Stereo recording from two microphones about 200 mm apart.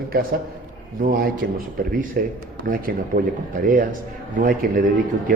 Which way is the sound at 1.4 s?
50° right (ahead or behind).